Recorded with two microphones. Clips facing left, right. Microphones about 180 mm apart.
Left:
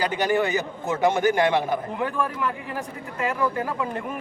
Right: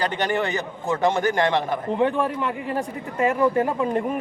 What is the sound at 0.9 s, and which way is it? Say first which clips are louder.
Speech: even; 15° left (ahead or behind).